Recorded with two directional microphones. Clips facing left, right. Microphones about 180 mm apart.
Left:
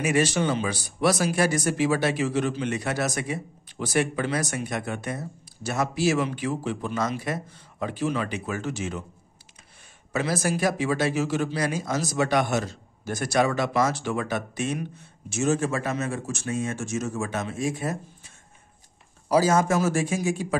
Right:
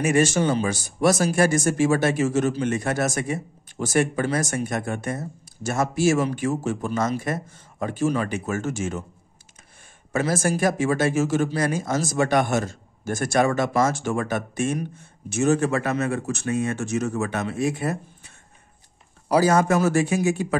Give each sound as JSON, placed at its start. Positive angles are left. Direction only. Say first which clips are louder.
{"t": 0.0, "sound": "speech", "louder": "right 3 dB", "side_deg": -45}
{"t": 10.1, "sound": "speech", "louder": "right 3 dB", "side_deg": -45}